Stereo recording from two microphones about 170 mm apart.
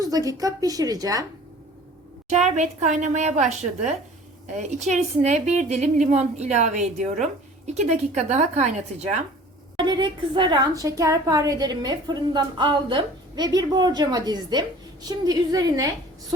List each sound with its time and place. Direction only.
0.0 s a woman's voice: 20° right (ahead or behind)
2.3 s a woman's voice: 40° right (ahead or behind)
4.5 s a woman's voice: 45° right (ahead or behind)
9.7 s a woman's voice: 25° right (ahead or behind)